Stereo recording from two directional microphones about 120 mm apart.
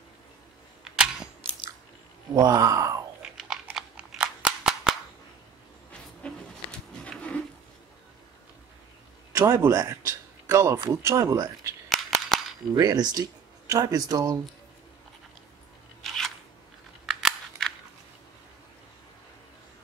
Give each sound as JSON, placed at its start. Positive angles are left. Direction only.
{"t": 0.8, "sound": "camera", "side_deg": -5}
{"t": 2.3, "sound": "speech", "side_deg": -30}
{"t": 3.2, "sound": "a sound", "side_deg": -5}
{"t": 6.2, "sound": "a sound", "side_deg": 10}
{"t": 9.3, "sound": "speech", "side_deg": -20}
{"t": 11.9, "sound": "scissors", "side_deg": 0}
{"t": 12.7, "sound": "speech", "side_deg": -35}
{"t": 17.0, "sound": "scissors", "side_deg": 0}